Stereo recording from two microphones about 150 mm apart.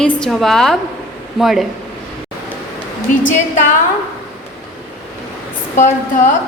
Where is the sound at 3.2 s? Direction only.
60° left (ahead or behind).